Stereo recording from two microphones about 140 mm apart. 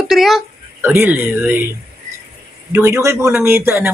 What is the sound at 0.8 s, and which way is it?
Speech, 15° right (ahead or behind).